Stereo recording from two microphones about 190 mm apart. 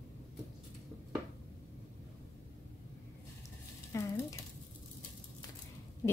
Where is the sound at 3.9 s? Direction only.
15° left (ahead or behind).